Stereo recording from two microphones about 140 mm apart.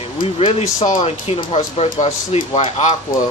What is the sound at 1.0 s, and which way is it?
Speech, 45° left (ahead or behind).